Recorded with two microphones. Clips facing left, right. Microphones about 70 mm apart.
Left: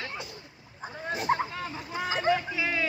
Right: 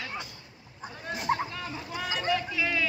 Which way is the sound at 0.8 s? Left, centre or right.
Left.